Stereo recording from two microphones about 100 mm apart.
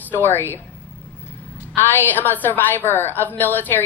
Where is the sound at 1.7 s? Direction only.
20° left (ahead or behind).